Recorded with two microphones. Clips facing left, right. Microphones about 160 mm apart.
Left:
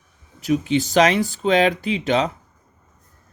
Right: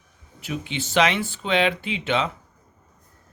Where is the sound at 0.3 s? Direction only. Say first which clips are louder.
Left 11 dB; 40° left (ahead or behind).